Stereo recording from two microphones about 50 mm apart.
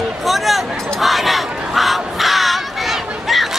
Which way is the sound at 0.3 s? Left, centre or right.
Centre.